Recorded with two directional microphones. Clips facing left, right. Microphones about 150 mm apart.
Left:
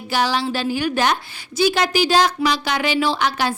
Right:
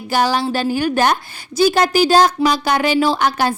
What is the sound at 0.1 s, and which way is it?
A woman's voice, 45° right (ahead or behind).